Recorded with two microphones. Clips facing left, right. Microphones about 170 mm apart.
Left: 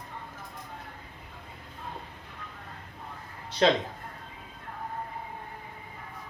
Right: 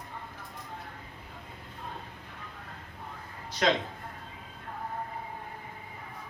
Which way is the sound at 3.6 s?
30° left (ahead or behind).